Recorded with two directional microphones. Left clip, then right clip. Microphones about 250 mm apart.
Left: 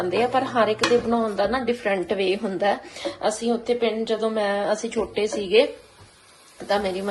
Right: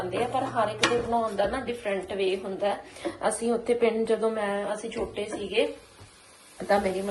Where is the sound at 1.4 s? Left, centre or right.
Centre.